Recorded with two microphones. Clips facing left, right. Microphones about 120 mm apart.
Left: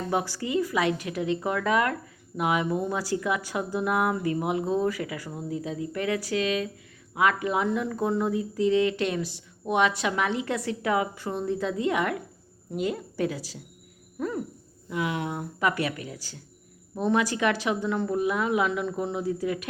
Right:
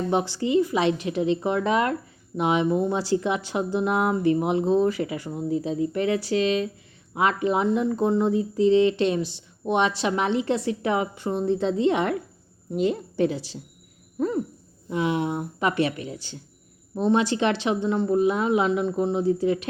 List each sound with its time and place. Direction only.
0.1 s speech: 25° right (ahead or behind)
14.8 s speech: 25° right (ahead or behind)